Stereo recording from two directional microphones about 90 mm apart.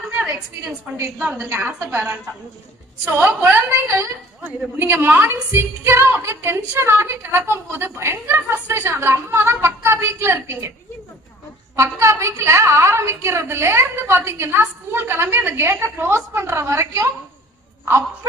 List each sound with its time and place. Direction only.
1.2 s a woman's voice: 10° right (ahead or behind)
1.5 s a woman's voice: 25° right (ahead or behind)
11.8 s a woman's voice: 30° right (ahead or behind)